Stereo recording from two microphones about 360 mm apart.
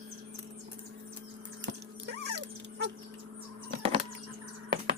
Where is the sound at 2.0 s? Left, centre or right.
Right.